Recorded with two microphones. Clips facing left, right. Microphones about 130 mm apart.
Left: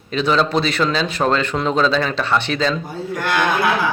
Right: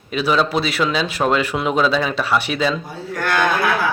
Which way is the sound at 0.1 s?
5° right (ahead or behind).